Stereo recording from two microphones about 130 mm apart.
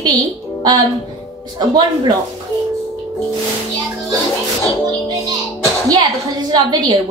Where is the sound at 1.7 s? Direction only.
30° right (ahead or behind).